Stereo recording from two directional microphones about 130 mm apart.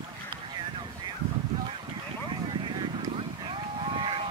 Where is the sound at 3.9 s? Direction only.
40° right (ahead or behind).